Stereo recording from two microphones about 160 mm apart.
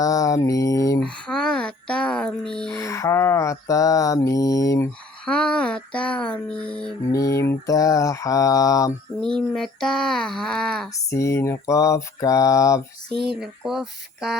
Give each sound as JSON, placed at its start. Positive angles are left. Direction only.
{"t": 0.0, "sound": "mantra", "side_deg": 20}
{"t": 1.1, "sound": "a sound", "side_deg": 5}
{"t": 2.8, "sound": "mantra", "side_deg": 20}
{"t": 5.2, "sound": "music", "side_deg": 5}
{"t": 7.1, "sound": "mantra", "side_deg": 20}
{"t": 9.2, "sound": "speech", "side_deg": 5}
{"t": 10.9, "sound": "mantra", "side_deg": 20}
{"t": 13.2, "sound": "speech", "side_deg": -5}